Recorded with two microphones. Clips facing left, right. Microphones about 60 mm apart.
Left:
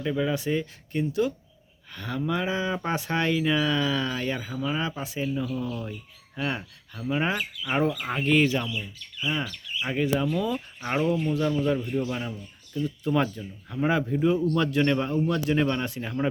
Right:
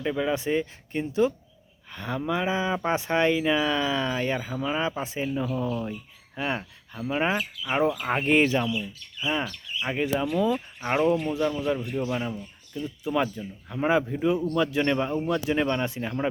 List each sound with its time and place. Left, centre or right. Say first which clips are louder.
0.0 s speech: even; centre
0.3 s speech: right 1 dB; right
8.1 s speech: right 1 dB; right
9.1 s speech: right 1 dB; centre